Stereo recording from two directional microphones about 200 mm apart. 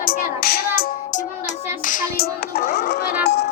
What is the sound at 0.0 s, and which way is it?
Music, 45° left (ahead or behind).